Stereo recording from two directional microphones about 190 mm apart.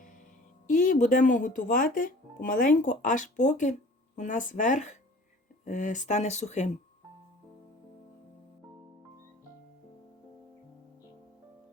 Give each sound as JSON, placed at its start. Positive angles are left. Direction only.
{"t": 0.7, "sound": "speech", "side_deg": 45}